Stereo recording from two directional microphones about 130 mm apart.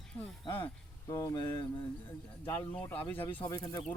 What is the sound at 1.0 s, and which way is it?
Speech, 25° left (ahead or behind).